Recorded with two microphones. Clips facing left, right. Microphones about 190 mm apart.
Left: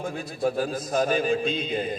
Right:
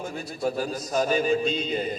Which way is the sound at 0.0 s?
50° left (ahead or behind).